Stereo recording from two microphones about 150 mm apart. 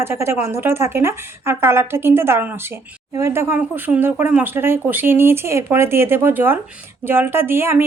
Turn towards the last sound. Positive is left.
turn(degrees=-15)  # may be behind; listen again after turning